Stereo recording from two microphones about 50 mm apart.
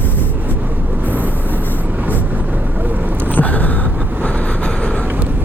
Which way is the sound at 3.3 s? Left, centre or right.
Left.